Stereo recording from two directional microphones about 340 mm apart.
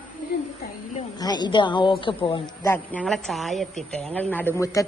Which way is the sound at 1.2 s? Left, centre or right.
Centre.